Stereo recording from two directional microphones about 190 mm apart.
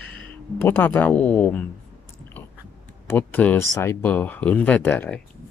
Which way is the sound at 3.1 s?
10° left (ahead or behind).